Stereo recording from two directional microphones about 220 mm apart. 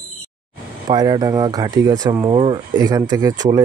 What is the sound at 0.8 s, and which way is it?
Speech, 20° right (ahead or behind).